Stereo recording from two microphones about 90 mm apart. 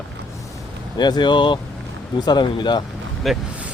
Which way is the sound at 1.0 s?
55° left (ahead or behind).